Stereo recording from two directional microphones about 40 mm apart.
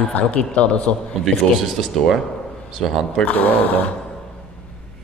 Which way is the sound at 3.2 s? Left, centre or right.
Left.